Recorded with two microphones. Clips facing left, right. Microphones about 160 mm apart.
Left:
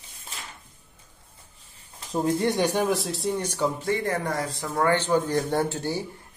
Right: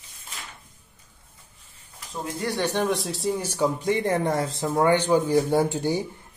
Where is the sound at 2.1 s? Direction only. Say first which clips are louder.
Left 7 dB; 35° left (ahead or behind).